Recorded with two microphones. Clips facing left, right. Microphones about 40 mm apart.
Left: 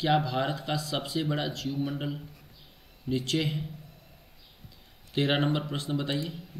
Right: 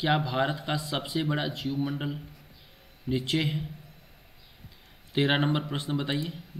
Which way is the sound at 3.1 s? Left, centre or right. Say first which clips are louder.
Right 1 dB; centre.